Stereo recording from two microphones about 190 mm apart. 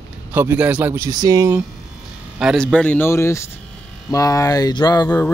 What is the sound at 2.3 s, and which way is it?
Speech, centre (ahead or behind).